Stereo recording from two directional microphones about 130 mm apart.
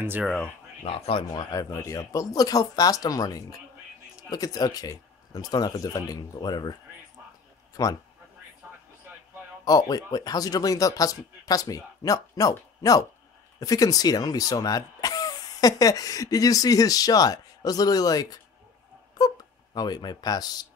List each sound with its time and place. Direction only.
0.2 s speech: centre (ahead or behind)
0.8 s speech: 50° left (ahead or behind)
1.5 s speech: 25° left (ahead or behind)
7.7 s speech: 30° left (ahead or behind)
9.7 s speech: 30° left (ahead or behind)